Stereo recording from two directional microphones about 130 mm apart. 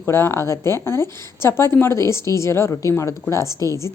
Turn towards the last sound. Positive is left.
turn(degrees=25)  # may be behind; listen again after turning